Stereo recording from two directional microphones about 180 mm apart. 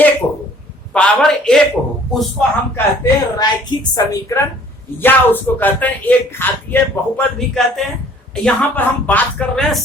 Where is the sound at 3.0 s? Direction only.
25° left (ahead or behind).